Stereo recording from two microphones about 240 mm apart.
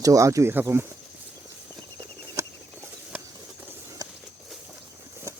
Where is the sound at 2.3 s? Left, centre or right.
Centre.